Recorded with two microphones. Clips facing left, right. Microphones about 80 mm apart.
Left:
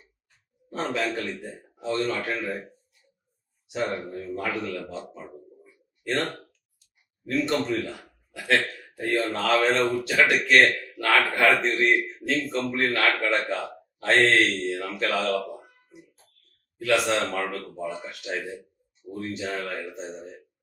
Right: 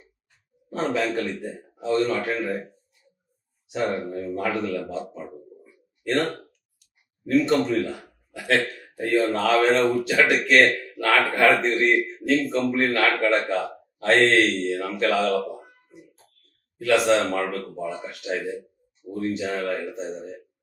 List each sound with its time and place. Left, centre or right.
0.9 s speech: centre
3.7 s a man's voice: centre
16.7 s speech: centre